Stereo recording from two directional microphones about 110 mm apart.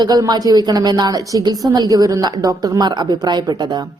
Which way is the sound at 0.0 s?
35° right (ahead or behind).